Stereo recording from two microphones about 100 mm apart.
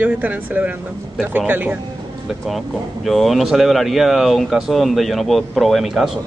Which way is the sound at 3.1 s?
Centre (ahead or behind).